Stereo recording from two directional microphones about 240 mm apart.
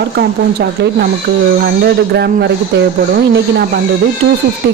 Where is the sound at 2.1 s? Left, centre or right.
Right.